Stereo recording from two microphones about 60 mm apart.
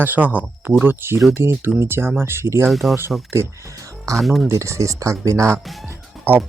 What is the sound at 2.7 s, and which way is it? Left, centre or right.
Speech, centre.